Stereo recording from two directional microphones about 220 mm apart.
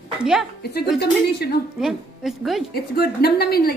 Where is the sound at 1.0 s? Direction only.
45° left (ahead or behind).